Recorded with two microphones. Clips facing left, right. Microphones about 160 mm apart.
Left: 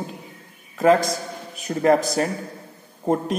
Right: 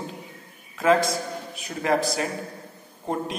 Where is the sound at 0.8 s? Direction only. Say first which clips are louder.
Left 3 dB; 40° left (ahead or behind).